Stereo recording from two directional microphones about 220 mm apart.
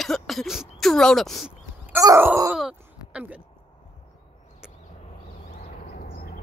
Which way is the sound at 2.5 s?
5° right (ahead or behind).